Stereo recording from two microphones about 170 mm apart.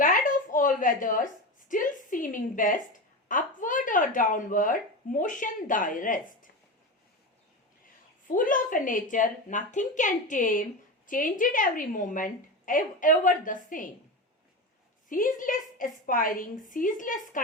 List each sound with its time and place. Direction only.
0.0 s a sound: 50° left (ahead or behind)
3.2 s speech: 50° left (ahead or behind)
8.3 s a woman's voice: 50° left (ahead or behind)
15.1 s a woman's voice: 50° left (ahead or behind)